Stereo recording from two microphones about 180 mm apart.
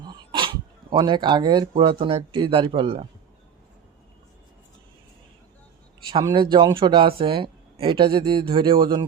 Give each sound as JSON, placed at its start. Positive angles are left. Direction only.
{"t": 0.0, "sound": "speech", "side_deg": -25}
{"t": 6.1, "sound": "speech", "side_deg": -25}